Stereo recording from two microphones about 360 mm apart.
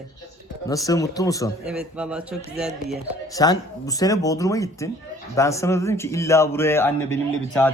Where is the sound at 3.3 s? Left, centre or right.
Centre.